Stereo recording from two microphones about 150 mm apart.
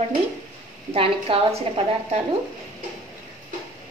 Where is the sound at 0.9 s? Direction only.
40° right (ahead or behind).